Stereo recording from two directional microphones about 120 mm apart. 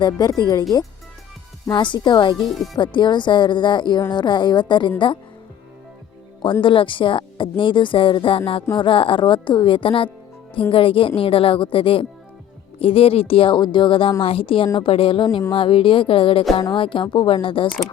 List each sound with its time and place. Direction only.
0.0 s speech: 35° left (ahead or behind)
1.7 s speech: 40° left (ahead or behind)
6.4 s speech: 45° left (ahead or behind)